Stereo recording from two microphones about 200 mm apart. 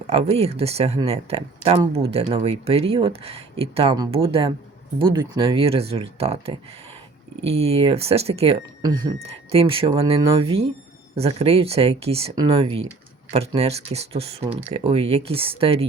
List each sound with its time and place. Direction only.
0.1 s speech: 30° right (ahead or behind)